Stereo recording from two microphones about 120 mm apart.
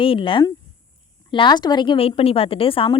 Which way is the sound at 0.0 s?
45° left (ahead or behind).